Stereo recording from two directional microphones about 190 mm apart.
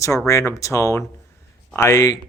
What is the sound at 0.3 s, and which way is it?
Speech, 15° left (ahead or behind).